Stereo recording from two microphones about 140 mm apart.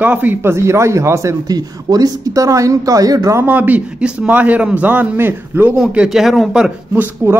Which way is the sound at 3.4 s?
10° right (ahead or behind).